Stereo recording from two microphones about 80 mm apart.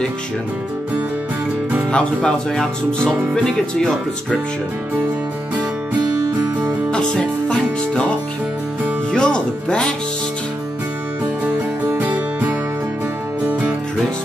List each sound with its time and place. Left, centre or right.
1.9 s speech: centre
6.9 s music: centre
9.1 s music: centre
12.0 s music: right